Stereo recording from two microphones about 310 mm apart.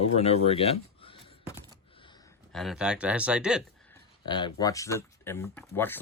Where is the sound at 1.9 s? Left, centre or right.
Centre.